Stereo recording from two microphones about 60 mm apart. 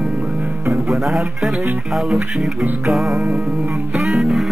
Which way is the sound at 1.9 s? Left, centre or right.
Centre.